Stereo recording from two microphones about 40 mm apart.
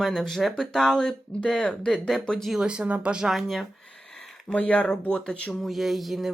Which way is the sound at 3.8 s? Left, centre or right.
Centre.